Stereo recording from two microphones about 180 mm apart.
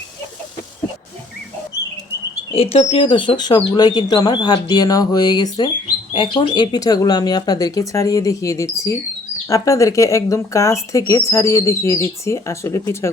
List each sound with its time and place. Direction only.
2.5 s speech: 30° left (ahead or behind); by 13.1 s 15° left (ahead or behind)